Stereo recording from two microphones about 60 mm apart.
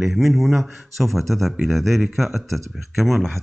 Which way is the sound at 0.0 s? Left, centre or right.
Centre.